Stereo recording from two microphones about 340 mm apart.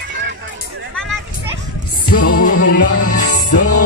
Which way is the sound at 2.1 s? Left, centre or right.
Left.